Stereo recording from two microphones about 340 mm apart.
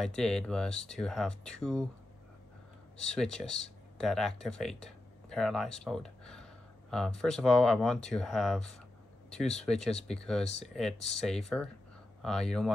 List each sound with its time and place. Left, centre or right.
0.0 s speech: centre
3.0 s speech: centre
10.0 s speech: centre